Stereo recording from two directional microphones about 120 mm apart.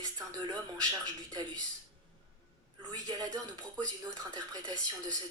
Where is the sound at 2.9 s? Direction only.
30° right (ahead or behind).